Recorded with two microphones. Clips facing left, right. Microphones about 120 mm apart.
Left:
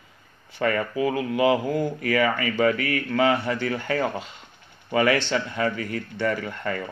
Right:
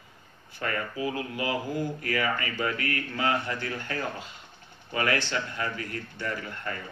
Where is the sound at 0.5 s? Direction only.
90° left.